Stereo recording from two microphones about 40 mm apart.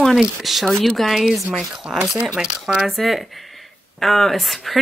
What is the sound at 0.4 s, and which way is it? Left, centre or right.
Speech, centre.